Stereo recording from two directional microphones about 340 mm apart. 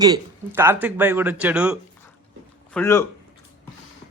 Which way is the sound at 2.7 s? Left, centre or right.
Centre.